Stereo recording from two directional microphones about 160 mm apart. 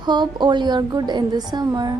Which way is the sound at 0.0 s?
25° right (ahead or behind).